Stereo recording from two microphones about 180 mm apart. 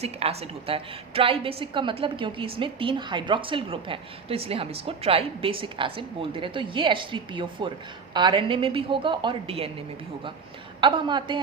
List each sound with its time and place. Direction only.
0.0 s a woman's voice: 35° right (ahead or behind)
10.8 s a woman's voice: 25° right (ahead or behind)